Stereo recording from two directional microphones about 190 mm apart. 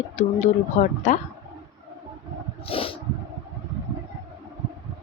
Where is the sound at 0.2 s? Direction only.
35° left (ahead or behind).